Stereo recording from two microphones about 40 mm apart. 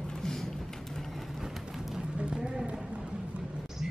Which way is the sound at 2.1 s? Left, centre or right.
Right.